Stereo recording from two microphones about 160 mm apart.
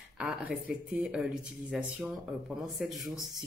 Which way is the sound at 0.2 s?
5° right (ahead or behind).